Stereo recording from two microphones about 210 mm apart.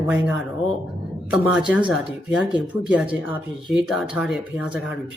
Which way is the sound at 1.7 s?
5° right (ahead or behind).